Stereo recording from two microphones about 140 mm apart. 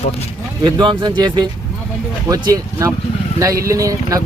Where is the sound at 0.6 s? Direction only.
35° right (ahead or behind).